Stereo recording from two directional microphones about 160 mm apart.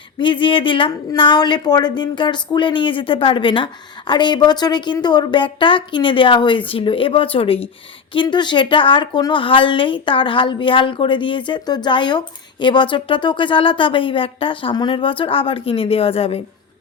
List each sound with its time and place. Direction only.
0.2 s a woman's voice: 30° left (ahead or behind)